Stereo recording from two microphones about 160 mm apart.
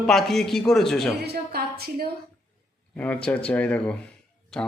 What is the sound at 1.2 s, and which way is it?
Speech, 85° right.